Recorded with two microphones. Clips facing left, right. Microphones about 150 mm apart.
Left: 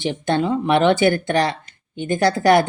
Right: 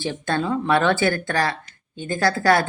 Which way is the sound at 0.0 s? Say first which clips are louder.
Left 4 dB; 20° left (ahead or behind).